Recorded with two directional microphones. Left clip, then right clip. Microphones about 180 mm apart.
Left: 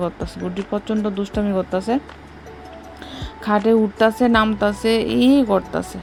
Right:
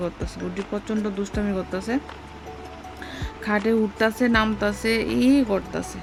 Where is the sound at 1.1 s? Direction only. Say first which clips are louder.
Left 5 dB; 15° left (ahead or behind).